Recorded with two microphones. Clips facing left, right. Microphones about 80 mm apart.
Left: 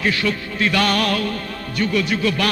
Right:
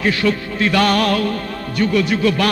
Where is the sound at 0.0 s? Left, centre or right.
Right.